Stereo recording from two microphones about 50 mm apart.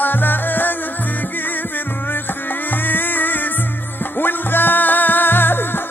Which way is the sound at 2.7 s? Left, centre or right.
Left.